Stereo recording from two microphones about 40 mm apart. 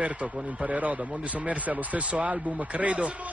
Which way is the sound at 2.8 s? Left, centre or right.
Right.